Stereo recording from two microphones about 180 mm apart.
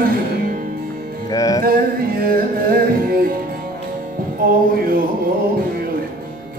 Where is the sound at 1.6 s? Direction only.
55° right (ahead or behind).